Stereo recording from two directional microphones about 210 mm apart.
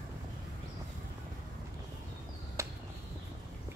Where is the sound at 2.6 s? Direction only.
15° right (ahead or behind).